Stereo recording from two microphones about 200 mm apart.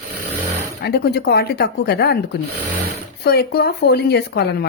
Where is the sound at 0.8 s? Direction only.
55° left (ahead or behind).